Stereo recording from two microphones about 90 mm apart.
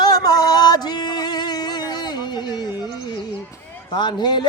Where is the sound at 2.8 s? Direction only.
50° left (ahead or behind).